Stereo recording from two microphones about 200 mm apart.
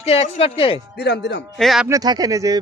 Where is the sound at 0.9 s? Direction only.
55° left (ahead or behind).